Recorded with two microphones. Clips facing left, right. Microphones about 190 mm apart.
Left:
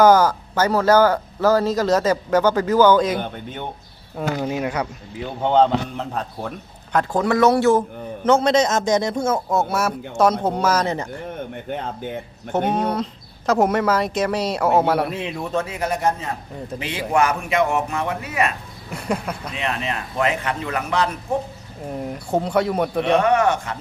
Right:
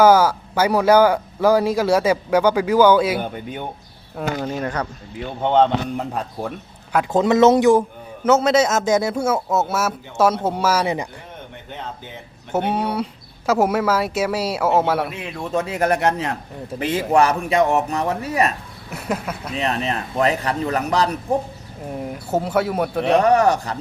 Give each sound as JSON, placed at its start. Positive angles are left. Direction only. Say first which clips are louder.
{"t": 0.0, "sound": "speech", "louder": "even", "side_deg": -10}
{"t": 4.4, "sound": "speech", "louder": "left 1 dB", "side_deg": 10}
{"t": 6.0, "sound": "speech", "louder": "right 2 dB", "side_deg": -10}
{"t": 7.1, "sound": "a man's voice", "louder": "right 4 dB", "side_deg": -20}
{"t": 8.2, "sound": "speech", "louder": "right 1 dB", "side_deg": -5}
{"t": 12.5, "sound": "speech", "louder": "left 1 dB", "side_deg": -10}
{"t": 15.8, "sound": "speech", "louder": "right 6 dB", "side_deg": -70}
{"t": 16.8, "sound": "a man's voice", "louder": "right 3 dB", "side_deg": -45}
{"t": 18.9, "sound": "speech", "louder": "left 1 dB", "side_deg": -5}
{"t": 19.5, "sound": "a man's voice", "louder": "right 4 dB", "side_deg": -35}
{"t": 21.8, "sound": "speech", "louder": "even", "side_deg": 0}
{"t": 23.1, "sound": "a man's voice", "louder": "right 3 dB", "side_deg": -35}